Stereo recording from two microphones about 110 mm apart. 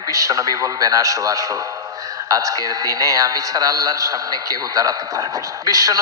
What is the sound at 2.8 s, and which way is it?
A man's voice, 35° right (ahead or behind).